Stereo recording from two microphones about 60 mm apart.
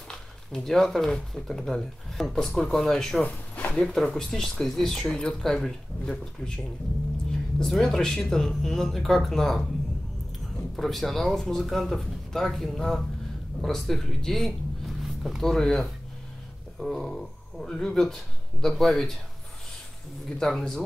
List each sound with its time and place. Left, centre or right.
0.1 s speech: centre
3.3 s a sound: left
3.7 s speech: centre
7.5 s speech: centre
10.8 s speech: centre
20.2 s speech: centre